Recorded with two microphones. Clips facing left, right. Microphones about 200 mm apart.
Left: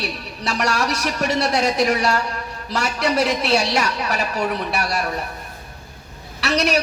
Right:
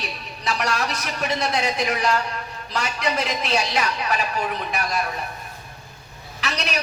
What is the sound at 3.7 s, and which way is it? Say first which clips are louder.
Speech: left 2 dB; 40° left (ahead or behind).